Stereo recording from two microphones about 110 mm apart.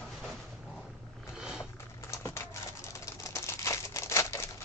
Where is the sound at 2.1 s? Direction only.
25° left (ahead or behind).